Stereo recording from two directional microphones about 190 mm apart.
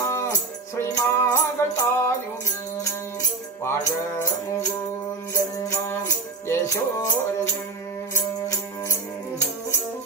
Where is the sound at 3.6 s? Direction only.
15° left (ahead or behind).